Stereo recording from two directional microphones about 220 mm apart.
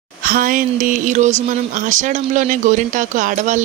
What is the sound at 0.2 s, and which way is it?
Speech, 40° right (ahead or behind).